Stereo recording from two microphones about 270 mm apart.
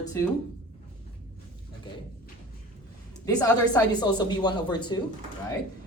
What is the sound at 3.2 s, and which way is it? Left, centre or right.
A woman's voice, centre.